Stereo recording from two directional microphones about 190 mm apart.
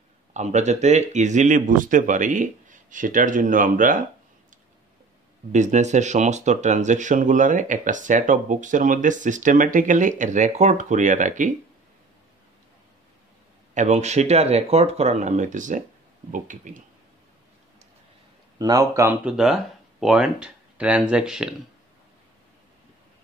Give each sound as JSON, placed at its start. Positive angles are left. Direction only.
{"t": 0.3, "sound": "speech", "side_deg": -40}
{"t": 5.5, "sound": "speech", "side_deg": -40}
{"t": 13.7, "sound": "speech", "side_deg": -40}
{"t": 18.6, "sound": "speech", "side_deg": -20}
{"t": 19.2, "sound": "speech", "side_deg": -5}